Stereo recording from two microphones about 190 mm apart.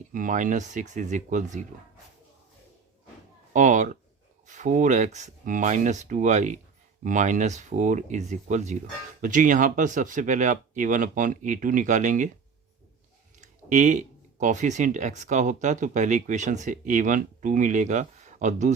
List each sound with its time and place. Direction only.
0.1 s speech: 45° right (ahead or behind)
3.5 s speech: 40° right (ahead or behind)
13.4 s speech: 40° right (ahead or behind)